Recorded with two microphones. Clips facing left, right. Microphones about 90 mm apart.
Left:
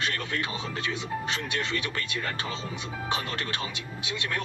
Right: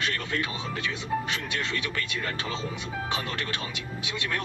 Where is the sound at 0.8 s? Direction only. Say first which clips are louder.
Right 3 dB; 30° left (ahead or behind).